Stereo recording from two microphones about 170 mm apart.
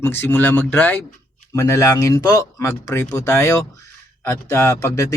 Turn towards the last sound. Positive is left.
turn(degrees=15)  # may be behind; listen again after turning